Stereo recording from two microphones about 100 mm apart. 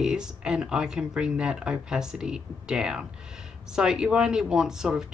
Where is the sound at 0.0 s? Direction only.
5° right (ahead or behind).